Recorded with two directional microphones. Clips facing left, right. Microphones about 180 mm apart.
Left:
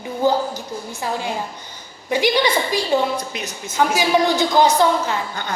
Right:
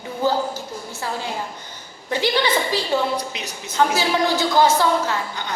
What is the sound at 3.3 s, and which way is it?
Speech, 50° left (ahead or behind).